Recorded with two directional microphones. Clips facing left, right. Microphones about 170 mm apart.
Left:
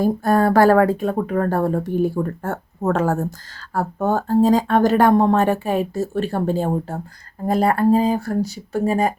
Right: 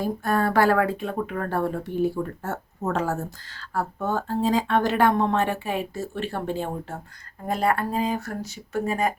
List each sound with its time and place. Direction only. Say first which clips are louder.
0.0 s speech: left 7 dB; 40° left (ahead or behind)